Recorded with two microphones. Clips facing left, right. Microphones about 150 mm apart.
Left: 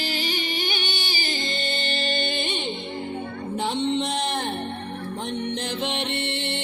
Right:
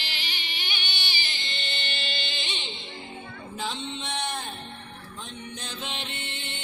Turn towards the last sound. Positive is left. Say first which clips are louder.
# left 11 dB
turn(degrees=80)